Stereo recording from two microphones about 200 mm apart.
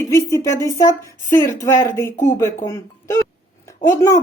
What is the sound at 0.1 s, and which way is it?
Speech, 15° left (ahead or behind).